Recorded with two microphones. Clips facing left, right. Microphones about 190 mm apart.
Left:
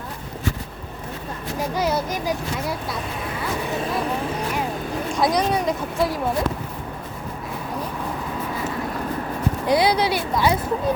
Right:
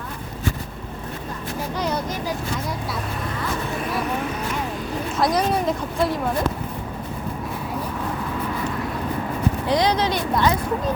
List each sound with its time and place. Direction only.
1.7 s speech: 5° left (ahead or behind)
5.1 s speech: 5° right (ahead or behind)
9.6 s speech: 10° left (ahead or behind)